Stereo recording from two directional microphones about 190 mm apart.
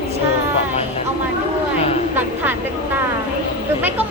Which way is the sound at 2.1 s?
10° right (ahead or behind).